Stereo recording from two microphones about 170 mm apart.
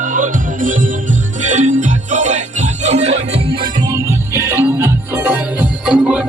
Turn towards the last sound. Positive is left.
turn(degrees=-5)  # may be behind; listen again after turning